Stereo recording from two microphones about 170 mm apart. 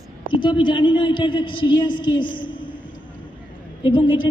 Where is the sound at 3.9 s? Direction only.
30° left (ahead or behind).